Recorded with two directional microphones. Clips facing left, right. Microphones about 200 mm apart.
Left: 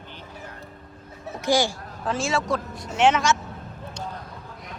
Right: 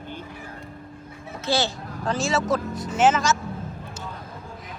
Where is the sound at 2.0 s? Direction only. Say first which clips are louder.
Right 1 dB; centre (ahead or behind).